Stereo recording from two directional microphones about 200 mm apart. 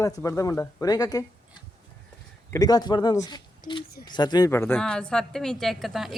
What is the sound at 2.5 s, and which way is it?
Speech, 20° left (ahead or behind).